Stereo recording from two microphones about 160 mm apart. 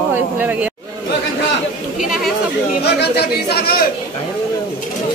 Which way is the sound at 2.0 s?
Centre (ahead or behind).